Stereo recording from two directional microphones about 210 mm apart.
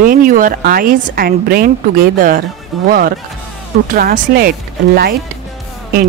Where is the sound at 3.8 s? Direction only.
40° right (ahead or behind).